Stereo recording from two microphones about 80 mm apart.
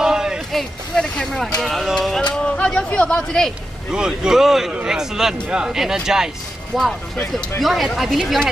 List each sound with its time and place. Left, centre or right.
0.0 s a sound: centre
0.5 s speech: centre
3.9 s speech: centre